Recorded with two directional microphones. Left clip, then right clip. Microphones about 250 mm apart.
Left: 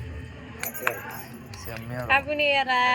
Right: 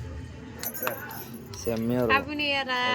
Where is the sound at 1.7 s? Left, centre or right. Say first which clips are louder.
Right 9 dB; right.